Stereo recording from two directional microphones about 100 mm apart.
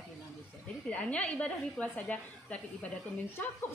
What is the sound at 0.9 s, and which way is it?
A woman's voice, 15° left (ahead or behind).